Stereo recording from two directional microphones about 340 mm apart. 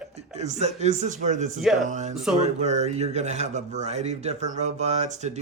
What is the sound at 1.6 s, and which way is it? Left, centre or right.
Speech, centre.